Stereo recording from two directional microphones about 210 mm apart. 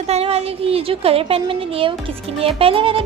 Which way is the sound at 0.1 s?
30° right (ahead or behind).